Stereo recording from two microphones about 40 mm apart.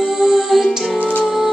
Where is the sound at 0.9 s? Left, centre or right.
Left.